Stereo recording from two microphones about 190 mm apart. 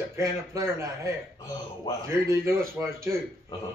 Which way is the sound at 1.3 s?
20° left (ahead or behind).